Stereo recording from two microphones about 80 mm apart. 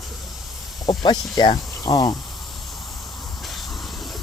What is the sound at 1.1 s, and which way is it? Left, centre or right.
Speech, left.